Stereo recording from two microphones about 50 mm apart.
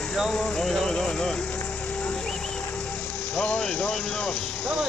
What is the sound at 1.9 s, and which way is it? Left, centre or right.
Music, left.